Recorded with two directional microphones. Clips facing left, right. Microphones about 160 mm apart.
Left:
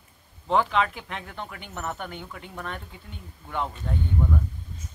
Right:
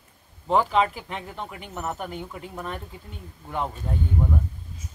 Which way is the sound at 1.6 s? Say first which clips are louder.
Right 3 dB; 5° right (ahead or behind).